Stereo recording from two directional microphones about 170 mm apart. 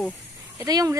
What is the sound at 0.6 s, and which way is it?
Speech, 20° right (ahead or behind).